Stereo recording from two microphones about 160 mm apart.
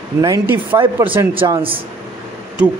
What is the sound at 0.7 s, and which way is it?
Speech, 20° right (ahead or behind).